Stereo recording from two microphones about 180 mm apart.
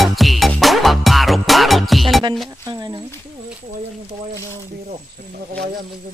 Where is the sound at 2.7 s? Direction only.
20° right (ahead or behind).